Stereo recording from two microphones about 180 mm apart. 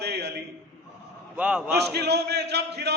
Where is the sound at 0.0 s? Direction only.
65° right (ahead or behind).